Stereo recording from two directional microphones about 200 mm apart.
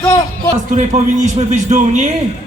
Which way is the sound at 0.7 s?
40° right (ahead or behind).